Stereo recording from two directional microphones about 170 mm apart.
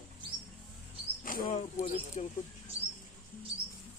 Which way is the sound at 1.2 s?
55° left (ahead or behind).